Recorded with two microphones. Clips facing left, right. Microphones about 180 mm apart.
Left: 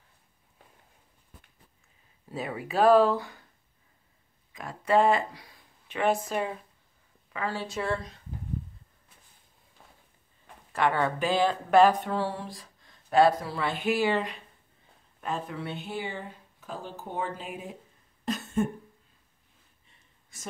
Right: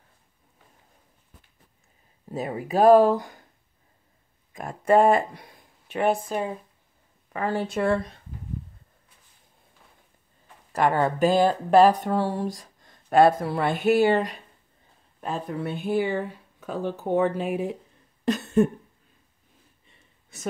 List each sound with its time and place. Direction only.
2.2 s speech: 40° right (ahead or behind)
4.6 s speech: 50° right (ahead or behind)
5.9 s speech: centre (ahead or behind)
7.3 s speech: 50° right (ahead or behind)
10.7 s speech: 40° right (ahead or behind); by 17.7 s 70° right (ahead or behind)